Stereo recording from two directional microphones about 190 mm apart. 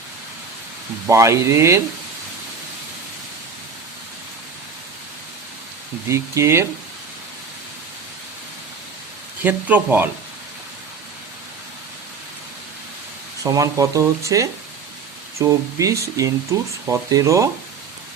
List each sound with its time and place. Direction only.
1.0 s speech: 15° right (ahead or behind)
6.1 s speech: 15° right (ahead or behind)
9.4 s speech: 10° right (ahead or behind)
13.4 s speech: 20° right (ahead or behind)